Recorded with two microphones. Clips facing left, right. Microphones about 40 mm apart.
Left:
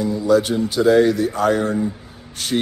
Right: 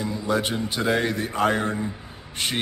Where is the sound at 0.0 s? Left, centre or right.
Right.